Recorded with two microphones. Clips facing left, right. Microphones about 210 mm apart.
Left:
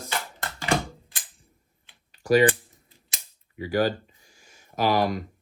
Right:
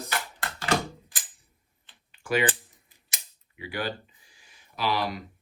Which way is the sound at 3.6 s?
40° left (ahead or behind).